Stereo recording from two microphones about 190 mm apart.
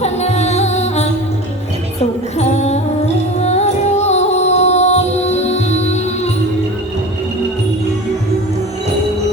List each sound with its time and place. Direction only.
0.0 s music: 35° left (ahead or behind)